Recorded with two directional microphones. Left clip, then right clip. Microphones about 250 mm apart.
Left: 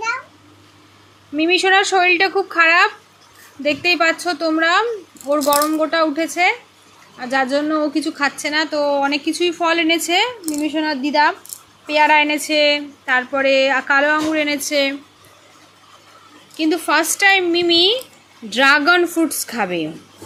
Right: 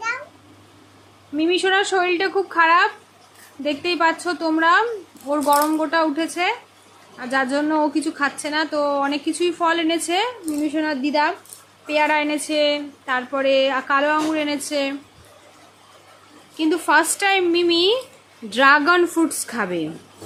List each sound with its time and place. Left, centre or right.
1.4 s a woman's voice: centre
16.6 s a woman's voice: centre